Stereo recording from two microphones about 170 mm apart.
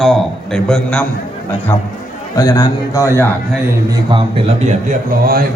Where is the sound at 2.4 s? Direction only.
20° left (ahead or behind).